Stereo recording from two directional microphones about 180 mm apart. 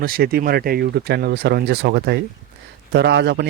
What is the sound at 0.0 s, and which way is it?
Speech, 55° right (ahead or behind).